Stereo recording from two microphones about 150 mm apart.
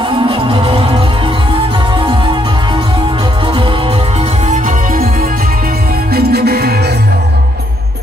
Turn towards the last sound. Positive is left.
turn(degrees=-90)